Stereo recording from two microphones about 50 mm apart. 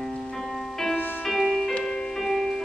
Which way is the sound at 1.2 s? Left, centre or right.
Centre.